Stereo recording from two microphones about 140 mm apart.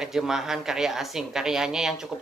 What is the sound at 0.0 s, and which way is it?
Speech, centre (ahead or behind).